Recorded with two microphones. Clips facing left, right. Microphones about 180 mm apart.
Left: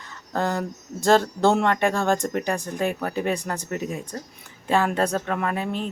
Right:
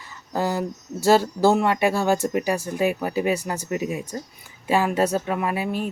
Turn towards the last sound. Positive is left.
turn(degrees=-10)  # may be behind; listen again after turning